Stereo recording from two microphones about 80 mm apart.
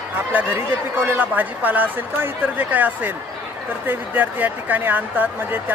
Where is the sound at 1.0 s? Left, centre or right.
Right.